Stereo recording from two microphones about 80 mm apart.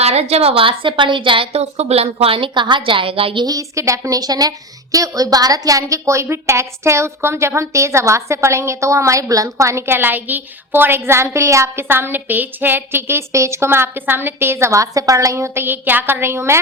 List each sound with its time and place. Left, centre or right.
0.6 s a woman's voice: right
3.4 s a woman's voice: right